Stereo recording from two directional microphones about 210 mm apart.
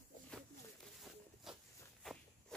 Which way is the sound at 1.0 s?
Centre (ahead or behind).